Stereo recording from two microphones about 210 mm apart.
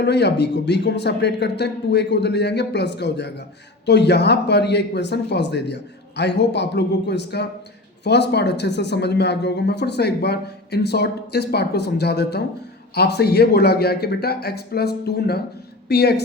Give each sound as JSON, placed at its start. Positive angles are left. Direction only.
{"t": 0.0, "sound": "speech", "side_deg": 55}